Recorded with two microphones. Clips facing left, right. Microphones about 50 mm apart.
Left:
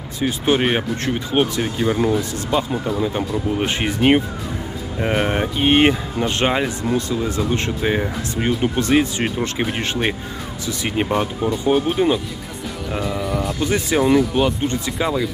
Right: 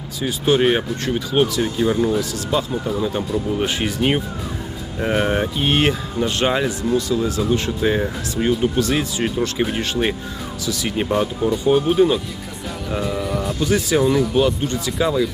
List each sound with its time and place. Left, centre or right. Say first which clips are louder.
0.2 s speech: even; left
0.6 s speech: right 2 dB; centre
2.5 s speech: left 2 dB; centre; by 4.0 s left
4.9 s speech: right 1 dB; centre
6.8 s speech: right 2 dB; left
7.8 s speech: right 1 dB; centre
10.9 s speech: even; centre
13.6 s speech: right 2 dB; left
14.2 s speech: even; centre